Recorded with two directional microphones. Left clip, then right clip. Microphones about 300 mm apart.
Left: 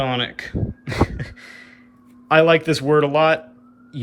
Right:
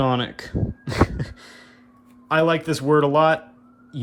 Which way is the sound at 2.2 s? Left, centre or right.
Centre.